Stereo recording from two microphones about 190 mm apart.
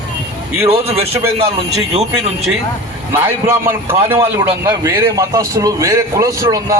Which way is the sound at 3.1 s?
10° right (ahead or behind).